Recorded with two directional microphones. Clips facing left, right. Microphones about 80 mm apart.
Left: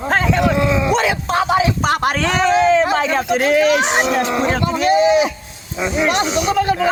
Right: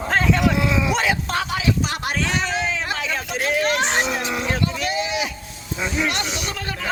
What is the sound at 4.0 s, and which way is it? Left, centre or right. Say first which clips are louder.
Speech: left 7 dB; left.